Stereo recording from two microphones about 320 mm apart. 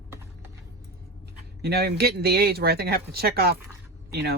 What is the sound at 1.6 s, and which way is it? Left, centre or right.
Speech, right.